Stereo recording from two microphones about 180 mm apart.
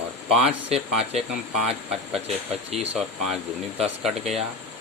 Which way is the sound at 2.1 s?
35° right (ahead or behind).